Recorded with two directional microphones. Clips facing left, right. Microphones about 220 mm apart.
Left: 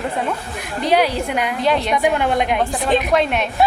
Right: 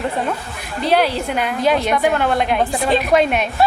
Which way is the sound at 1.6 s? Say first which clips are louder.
Right 2 dB; centre (ahead or behind).